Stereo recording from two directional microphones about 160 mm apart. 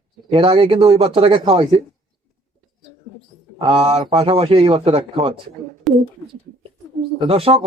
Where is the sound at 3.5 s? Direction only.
35° right (ahead or behind).